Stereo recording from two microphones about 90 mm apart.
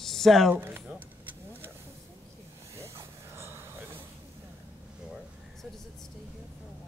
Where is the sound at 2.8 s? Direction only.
30° right (ahead or behind).